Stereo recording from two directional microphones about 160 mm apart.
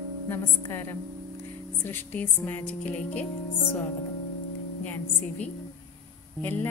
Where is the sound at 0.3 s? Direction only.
15° left (ahead or behind).